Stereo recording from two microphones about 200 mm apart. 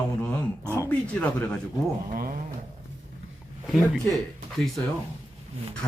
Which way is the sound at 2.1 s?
45° right (ahead or behind).